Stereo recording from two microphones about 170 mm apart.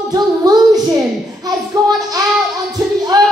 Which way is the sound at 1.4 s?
20° right (ahead or behind).